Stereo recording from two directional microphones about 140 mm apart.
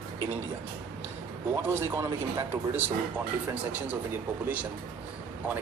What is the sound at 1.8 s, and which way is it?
Speech, 15° right (ahead or behind).